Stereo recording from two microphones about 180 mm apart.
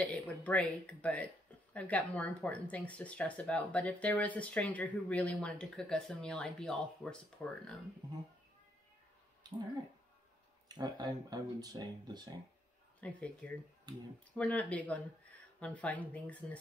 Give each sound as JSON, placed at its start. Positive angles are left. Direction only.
{"t": 0.0, "sound": "speech", "side_deg": 10}
{"t": 10.7, "sound": "speech", "side_deg": -25}
{"t": 13.0, "sound": "speech", "side_deg": 5}